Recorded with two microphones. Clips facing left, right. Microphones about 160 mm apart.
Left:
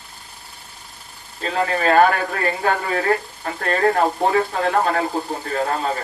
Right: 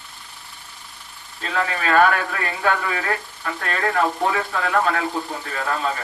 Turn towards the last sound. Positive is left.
turn(degrees=35)  # may be behind; listen again after turning